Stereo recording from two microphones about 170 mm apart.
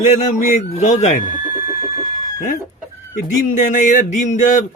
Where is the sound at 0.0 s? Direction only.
45° left (ahead or behind).